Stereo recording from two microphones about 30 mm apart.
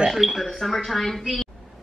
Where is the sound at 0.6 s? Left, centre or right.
Centre.